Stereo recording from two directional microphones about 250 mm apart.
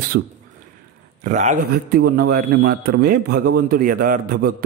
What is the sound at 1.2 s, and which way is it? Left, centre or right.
Speech, right.